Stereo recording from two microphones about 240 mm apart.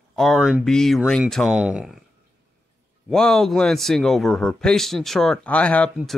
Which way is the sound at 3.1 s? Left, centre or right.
Centre.